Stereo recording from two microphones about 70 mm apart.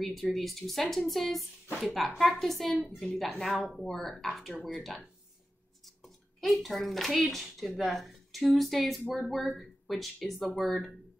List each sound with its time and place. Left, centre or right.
0.0 s speech: centre
6.0 s a child's voice: centre